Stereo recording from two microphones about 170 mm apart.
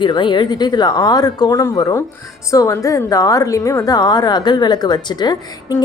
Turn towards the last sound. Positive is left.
turn(degrees=25)  # may be behind; listen again after turning